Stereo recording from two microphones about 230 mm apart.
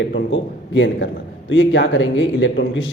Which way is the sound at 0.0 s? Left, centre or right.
Left.